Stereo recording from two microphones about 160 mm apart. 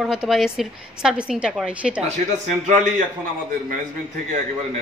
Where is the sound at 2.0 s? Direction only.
50° right (ahead or behind).